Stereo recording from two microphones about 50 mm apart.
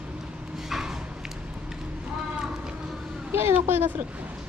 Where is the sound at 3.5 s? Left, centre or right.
Right.